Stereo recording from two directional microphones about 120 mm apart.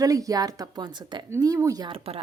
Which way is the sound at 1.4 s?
30° right (ahead or behind).